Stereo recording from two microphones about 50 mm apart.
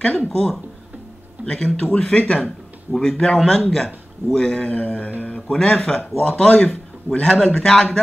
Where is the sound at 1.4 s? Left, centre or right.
Left.